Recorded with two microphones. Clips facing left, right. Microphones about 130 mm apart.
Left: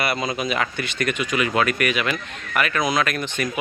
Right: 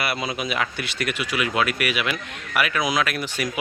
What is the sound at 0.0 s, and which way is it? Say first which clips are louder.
Speech: left 3 dB; 5° right (ahead or behind).